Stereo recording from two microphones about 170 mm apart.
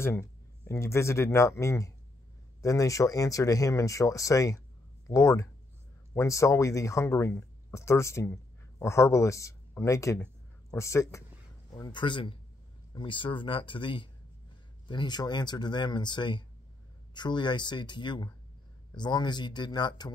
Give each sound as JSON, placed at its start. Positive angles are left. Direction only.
{"t": 0.0, "sound": "speech", "side_deg": 15}